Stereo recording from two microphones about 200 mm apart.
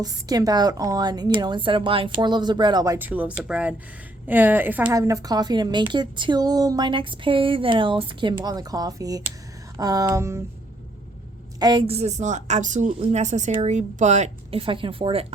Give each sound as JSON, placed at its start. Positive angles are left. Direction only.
{"t": 0.0, "sound": "a woman's voice", "side_deg": -20}
{"t": 9.7, "sound": "a sound", "side_deg": -15}
{"t": 11.6, "sound": "speech", "side_deg": -25}